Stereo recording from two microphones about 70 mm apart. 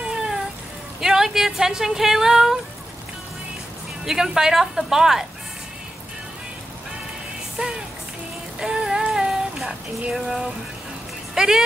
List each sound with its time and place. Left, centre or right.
0.0 s a sound: centre
1.0 s speech: centre
4.0 s a woman's voice: centre
7.6 s music: centre
8.5 s a sound: centre
11.3 s speech: centre